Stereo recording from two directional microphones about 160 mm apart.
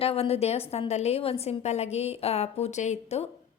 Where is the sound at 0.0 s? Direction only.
40° left (ahead or behind).